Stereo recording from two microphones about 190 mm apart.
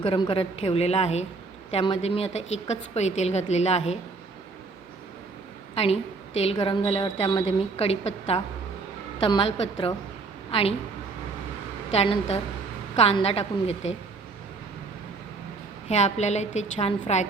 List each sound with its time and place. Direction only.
0.1 s a woman's voice: 30° left (ahead or behind)
5.7 s a woman's voice: 35° left (ahead or behind)
11.9 s a woman's voice: 35° left (ahead or behind)
15.9 s a woman's voice: 35° left (ahead or behind)